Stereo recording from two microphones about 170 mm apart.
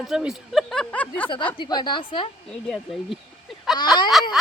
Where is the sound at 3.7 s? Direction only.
25° left (ahead or behind).